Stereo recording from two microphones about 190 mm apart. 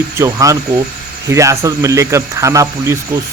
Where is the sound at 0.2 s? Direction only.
15° right (ahead or behind).